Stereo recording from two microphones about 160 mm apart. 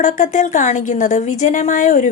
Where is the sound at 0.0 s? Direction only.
50° left (ahead or behind).